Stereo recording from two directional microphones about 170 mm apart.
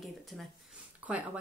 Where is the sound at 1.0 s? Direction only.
10° right (ahead or behind).